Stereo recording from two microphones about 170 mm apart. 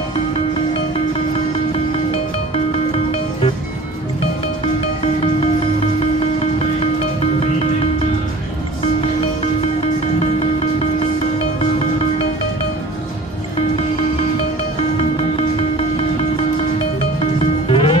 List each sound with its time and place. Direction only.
10.1 s music: 35° left (ahead or behind)
15.3 s music: 35° left (ahead or behind)